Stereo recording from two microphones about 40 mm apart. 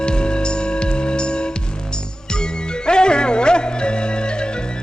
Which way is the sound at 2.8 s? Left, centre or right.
Left.